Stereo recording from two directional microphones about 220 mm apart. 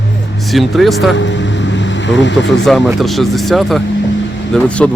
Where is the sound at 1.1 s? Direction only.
55° left (ahead or behind).